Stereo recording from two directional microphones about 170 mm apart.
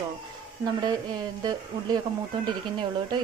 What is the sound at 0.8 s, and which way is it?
A woman's voice, 25° right (ahead or behind).